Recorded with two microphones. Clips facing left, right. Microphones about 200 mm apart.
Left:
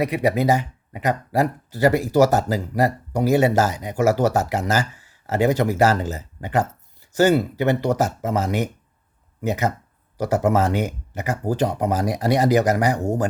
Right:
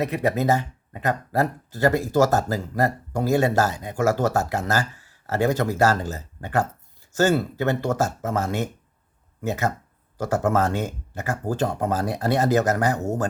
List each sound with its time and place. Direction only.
0.0 s speech: 15° left (ahead or behind)